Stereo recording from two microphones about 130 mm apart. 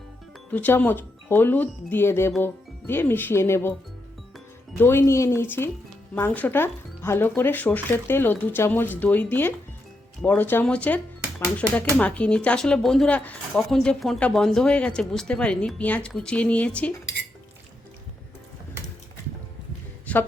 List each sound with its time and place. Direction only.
0.5 s speech: 15° left (ahead or behind)
4.8 s speech: 20° left (ahead or behind)
13.6 s speech: centre (ahead or behind)
20.1 s a sound: 10° left (ahead or behind)